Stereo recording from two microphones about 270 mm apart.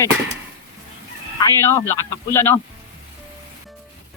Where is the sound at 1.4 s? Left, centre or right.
Centre.